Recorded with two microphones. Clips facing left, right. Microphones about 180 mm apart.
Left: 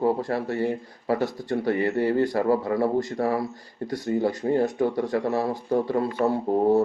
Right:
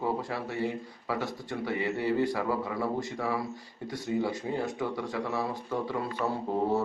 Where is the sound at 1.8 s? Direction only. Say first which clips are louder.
Left 5 dB; 55° left (ahead or behind).